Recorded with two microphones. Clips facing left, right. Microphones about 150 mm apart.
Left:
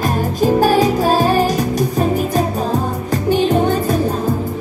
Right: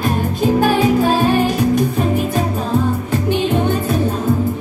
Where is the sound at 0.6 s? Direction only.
40° left (ahead or behind).